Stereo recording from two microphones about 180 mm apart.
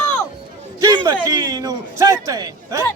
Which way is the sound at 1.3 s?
20° right (ahead or behind).